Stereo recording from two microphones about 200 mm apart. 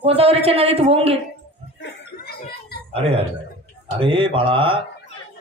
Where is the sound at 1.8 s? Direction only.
60° left (ahead or behind).